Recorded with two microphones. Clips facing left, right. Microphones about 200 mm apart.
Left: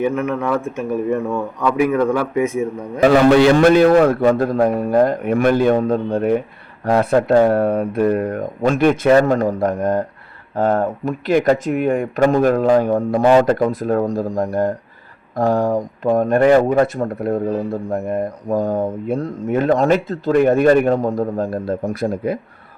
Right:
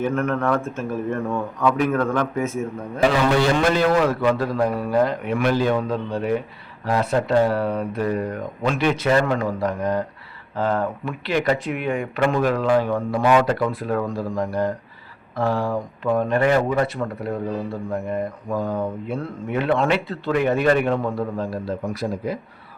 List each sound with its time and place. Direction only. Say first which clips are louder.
0.0 s speech: left 3 dB; 5° left (ahead or behind)
3.0 s speech: left 7 dB; 50° left (ahead or behind)